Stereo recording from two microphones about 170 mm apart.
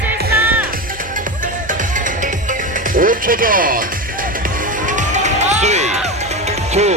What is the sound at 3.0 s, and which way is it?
Music, 55° right (ahead or behind).